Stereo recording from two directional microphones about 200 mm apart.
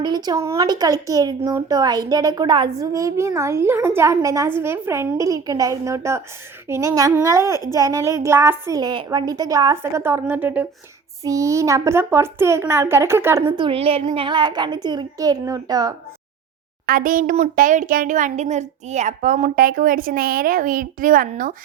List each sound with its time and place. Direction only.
0.0 s a woman's voice: 20° right (ahead or behind)
13.6 s a woman's voice: 25° right (ahead or behind)
16.8 s speech: 45° right (ahead or behind)